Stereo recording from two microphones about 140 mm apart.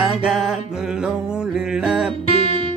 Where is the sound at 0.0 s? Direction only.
5° right (ahead or behind).